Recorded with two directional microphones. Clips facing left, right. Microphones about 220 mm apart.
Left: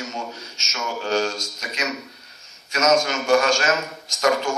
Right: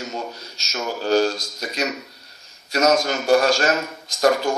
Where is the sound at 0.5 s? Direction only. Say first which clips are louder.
Right 3 dB; 35° right (ahead or behind).